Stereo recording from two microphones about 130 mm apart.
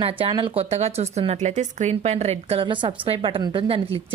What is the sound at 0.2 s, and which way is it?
Speech, 40° right (ahead or behind).